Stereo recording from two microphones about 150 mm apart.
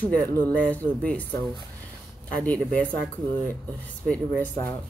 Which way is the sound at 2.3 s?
10° left (ahead or behind).